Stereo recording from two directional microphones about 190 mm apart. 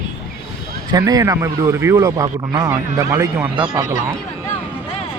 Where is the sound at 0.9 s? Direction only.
20° right (ahead or behind).